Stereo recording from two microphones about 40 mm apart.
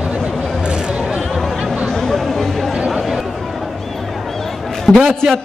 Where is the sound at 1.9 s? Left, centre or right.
Centre.